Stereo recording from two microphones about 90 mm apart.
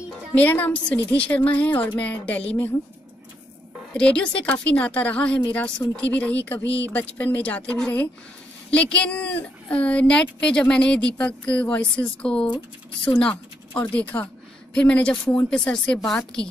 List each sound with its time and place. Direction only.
0.3 s a woman's voice: 15° left (ahead or behind)
3.9 s a woman's voice: 10° left (ahead or behind)